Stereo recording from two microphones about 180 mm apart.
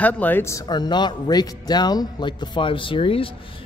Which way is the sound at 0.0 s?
10° left (ahead or behind).